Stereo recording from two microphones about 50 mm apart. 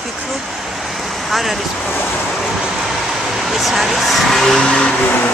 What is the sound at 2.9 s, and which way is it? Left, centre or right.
Vehicle, centre.